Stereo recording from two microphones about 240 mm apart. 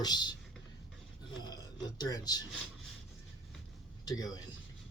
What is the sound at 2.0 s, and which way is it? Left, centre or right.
Speech, centre.